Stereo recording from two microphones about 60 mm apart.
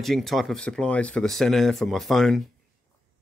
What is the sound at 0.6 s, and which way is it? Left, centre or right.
Speech, centre.